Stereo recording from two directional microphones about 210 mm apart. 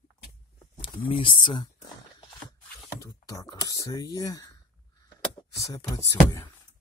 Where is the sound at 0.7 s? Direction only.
25° left (ahead or behind).